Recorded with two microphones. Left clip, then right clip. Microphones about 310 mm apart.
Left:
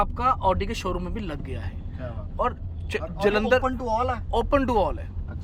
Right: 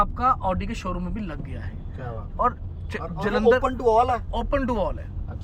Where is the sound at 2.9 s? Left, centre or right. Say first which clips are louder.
Left 3 dB; centre.